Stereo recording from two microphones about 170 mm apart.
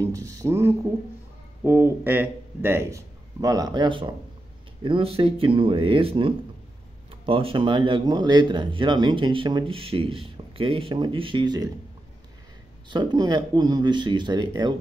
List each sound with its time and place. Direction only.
0.0 s a man's voice: 20° right (ahead or behind)
12.9 s speech: 25° right (ahead or behind)